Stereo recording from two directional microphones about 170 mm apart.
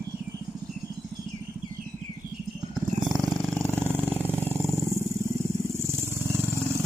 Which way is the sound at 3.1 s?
15° right (ahead or behind).